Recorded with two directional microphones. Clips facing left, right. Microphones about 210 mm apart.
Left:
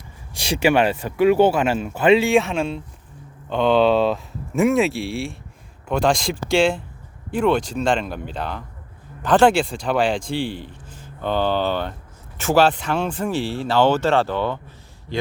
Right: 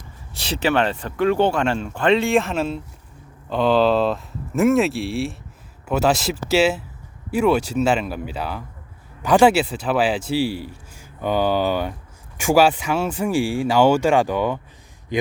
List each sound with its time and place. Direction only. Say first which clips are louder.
0.3 s a man's voice: left 2 dB; 10° left (ahead or behind); by 15.3 s 15° right (ahead or behind)